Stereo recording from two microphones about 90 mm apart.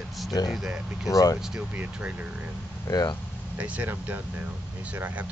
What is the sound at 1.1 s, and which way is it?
Speech, 40° left (ahead or behind).